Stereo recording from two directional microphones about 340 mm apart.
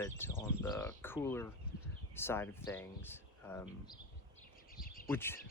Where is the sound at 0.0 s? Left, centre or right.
Centre.